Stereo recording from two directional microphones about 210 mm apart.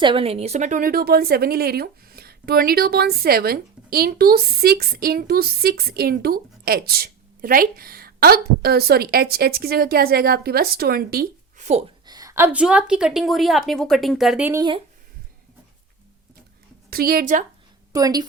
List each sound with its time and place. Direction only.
0.0 s speech: 25° right (ahead or behind)
12.0 s a woman's voice: 15° right (ahead or behind)
16.9 s speech: 45° right (ahead or behind)
17.9 s a woman's voice: 15° right (ahead or behind)